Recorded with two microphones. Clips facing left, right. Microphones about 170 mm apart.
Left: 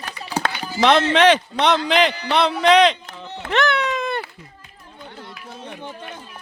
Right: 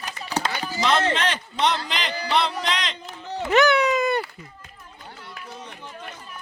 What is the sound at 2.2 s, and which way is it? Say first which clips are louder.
Music: left 4 dB; 65° left (ahead or behind).